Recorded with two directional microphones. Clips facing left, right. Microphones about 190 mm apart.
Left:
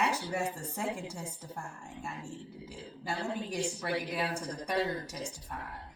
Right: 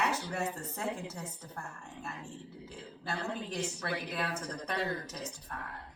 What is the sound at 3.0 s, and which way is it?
A woman's voice, 10° left (ahead or behind).